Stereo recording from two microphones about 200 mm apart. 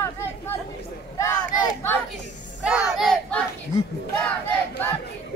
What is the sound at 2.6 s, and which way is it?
Battle cry, 5° right (ahead or behind).